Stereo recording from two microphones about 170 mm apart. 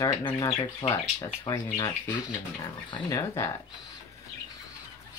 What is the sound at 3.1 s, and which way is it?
Speech, 15° left (ahead or behind).